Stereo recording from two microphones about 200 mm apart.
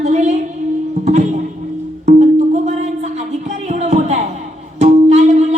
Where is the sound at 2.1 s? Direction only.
35° right (ahead or behind).